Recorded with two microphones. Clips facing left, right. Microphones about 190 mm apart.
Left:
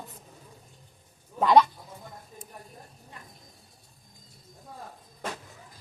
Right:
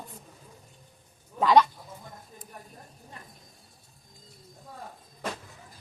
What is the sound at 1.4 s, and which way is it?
Speech, 5° left (ahead or behind).